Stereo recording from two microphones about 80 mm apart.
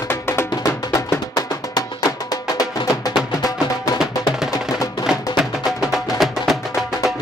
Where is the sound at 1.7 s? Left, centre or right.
Left.